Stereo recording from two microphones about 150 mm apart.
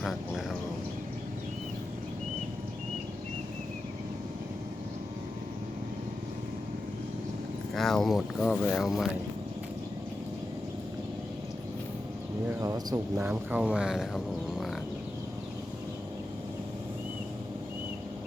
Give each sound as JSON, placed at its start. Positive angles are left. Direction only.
{"t": 0.0, "sound": "speech", "side_deg": 0}
{"t": 7.8, "sound": "speech", "side_deg": 0}
{"t": 12.5, "sound": "speech", "side_deg": -20}